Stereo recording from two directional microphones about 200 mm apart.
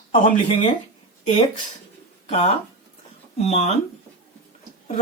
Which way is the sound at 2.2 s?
30° left (ahead or behind).